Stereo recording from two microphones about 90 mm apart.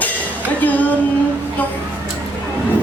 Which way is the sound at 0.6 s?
20° left (ahead or behind).